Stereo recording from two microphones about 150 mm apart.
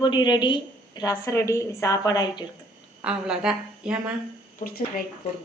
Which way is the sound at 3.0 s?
5° right (ahead or behind).